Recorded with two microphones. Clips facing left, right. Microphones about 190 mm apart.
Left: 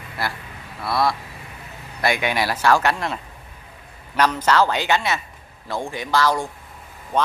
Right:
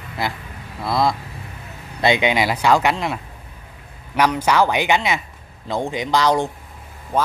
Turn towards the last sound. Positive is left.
turn(degrees=-5)  # may be behind; listen again after turning